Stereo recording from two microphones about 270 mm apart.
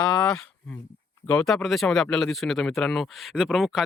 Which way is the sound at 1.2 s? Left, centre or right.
Centre.